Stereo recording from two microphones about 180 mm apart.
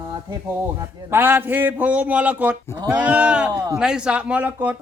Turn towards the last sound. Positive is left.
turn(degrees=-10)  # may be behind; listen again after turning